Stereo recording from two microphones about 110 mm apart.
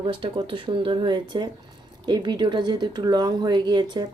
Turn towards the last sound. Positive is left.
turn(degrees=-40)  # may be behind; listen again after turning